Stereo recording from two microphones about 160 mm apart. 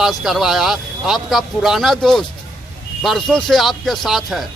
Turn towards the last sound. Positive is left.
turn(degrees=0)  # may be behind; listen again after turning